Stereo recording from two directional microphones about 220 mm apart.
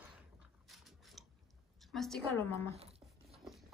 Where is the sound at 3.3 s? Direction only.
Centre (ahead or behind).